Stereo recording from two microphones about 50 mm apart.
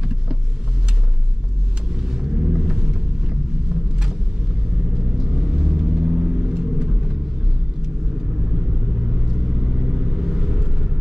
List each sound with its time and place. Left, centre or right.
2.0 s vehicle: centre
2.3 s a sound: right
2.6 s a sound: centre
3.7 s vehicle: centre
5.3 s vehicle: centre
9.7 s vehicle: right